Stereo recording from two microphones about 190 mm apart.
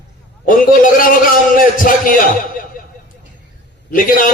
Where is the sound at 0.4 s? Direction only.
45° left (ahead or behind).